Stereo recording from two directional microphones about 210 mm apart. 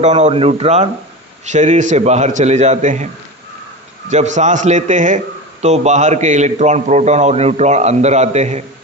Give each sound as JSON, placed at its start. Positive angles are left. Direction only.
{"t": 0.0, "sound": "a man's voice", "side_deg": -35}
{"t": 4.1, "sound": "a man's voice", "side_deg": -35}